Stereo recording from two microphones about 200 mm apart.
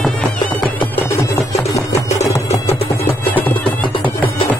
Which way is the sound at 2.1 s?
35° left (ahead or behind).